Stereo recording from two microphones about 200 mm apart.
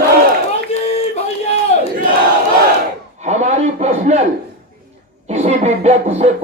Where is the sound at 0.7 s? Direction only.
30° left (ahead or behind).